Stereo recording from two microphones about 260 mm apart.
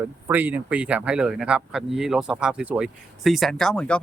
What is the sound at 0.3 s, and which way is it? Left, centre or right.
Speech, centre.